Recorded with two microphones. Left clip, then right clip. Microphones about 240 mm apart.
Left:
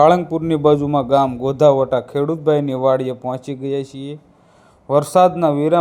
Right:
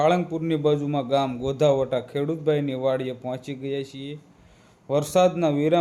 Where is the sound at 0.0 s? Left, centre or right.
Left.